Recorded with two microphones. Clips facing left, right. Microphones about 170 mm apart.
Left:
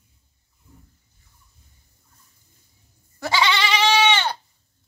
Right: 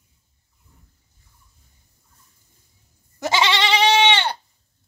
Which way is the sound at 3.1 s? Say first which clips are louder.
Right 1 dB; 20° right (ahead or behind).